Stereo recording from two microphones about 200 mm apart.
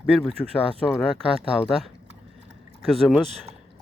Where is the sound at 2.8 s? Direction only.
Centre (ahead or behind).